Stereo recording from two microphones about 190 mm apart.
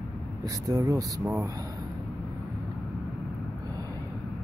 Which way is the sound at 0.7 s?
20° right (ahead or behind).